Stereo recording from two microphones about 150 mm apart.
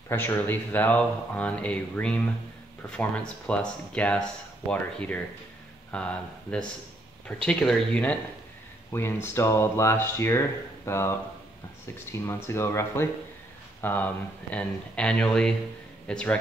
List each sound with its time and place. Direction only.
0.1 s speech: 15° left (ahead or behind)
12.4 s speech: 15° left (ahead or behind)